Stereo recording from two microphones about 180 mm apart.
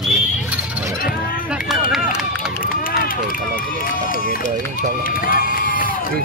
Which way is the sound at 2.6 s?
50° left (ahead or behind).